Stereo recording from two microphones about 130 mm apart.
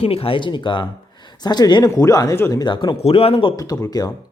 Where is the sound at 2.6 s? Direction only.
35° left (ahead or behind).